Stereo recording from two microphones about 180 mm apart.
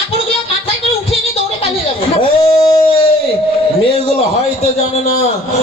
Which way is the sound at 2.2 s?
25° left (ahead or behind).